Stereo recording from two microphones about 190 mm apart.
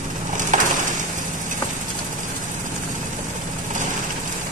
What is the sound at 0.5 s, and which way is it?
Crushing, 40° right (ahead or behind).